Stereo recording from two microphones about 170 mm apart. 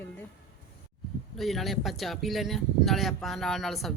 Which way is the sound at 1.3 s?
Centre (ahead or behind).